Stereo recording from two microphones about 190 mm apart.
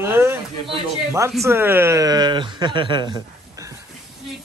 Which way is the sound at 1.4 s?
15° right (ahead or behind).